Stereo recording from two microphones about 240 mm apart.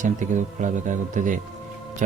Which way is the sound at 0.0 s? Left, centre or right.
Right.